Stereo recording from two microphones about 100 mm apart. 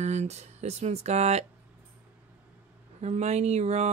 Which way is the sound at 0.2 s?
90° right.